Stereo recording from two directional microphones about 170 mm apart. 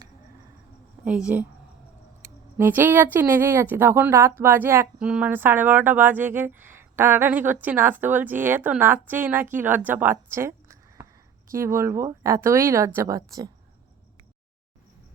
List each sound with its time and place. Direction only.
1.0 s speech: 5° right (ahead or behind)
2.6 s speech: 10° right (ahead or behind)